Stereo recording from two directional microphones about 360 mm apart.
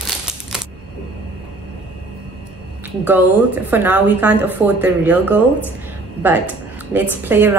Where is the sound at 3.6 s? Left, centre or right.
Centre.